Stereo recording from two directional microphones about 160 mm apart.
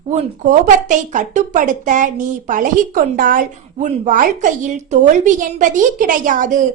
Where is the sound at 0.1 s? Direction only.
45° right (ahead or behind).